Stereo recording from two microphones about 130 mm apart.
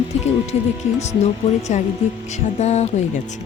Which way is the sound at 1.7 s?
65° left (ahead or behind).